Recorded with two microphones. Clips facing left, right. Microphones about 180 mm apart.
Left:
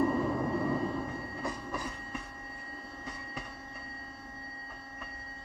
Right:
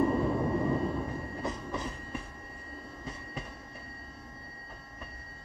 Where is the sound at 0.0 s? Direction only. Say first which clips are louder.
Right 1 dB; 15° right (ahead or behind).